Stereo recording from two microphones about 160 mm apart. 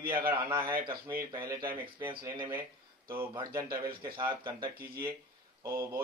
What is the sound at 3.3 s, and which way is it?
Speech, 25° right (ahead or behind).